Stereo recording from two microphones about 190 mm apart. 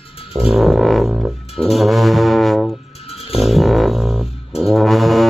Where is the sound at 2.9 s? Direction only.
30° left (ahead or behind).